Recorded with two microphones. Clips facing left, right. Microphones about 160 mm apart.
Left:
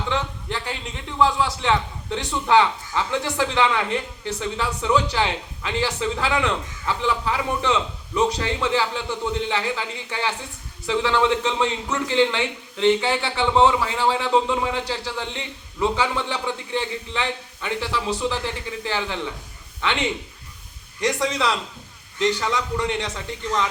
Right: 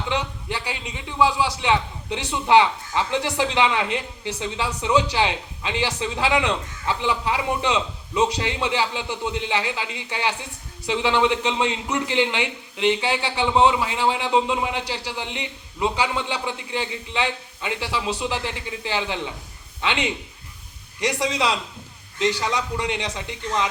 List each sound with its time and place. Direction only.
0.1 s a sound: 15° right (ahead or behind)
0.6 s a man's voice: centre (ahead or behind)
1.6 s a man's voice: 15° right (ahead or behind)